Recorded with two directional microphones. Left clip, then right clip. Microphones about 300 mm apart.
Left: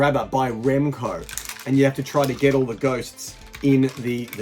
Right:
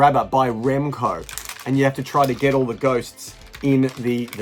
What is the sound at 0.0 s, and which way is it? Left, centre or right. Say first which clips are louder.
Speech: right 4 dB; centre.